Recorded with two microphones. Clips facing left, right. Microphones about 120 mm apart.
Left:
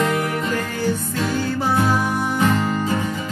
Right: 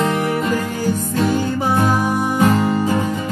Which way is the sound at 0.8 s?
45° right (ahead or behind).